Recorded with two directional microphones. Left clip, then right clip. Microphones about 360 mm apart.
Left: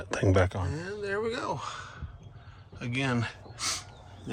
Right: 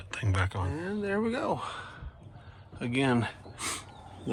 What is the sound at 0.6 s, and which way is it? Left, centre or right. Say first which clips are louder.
Speech: right 1 dB; centre.